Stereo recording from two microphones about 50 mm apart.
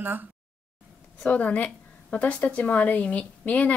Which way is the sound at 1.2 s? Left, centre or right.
Left.